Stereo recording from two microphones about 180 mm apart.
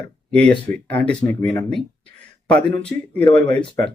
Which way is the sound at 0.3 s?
5° left (ahead or behind).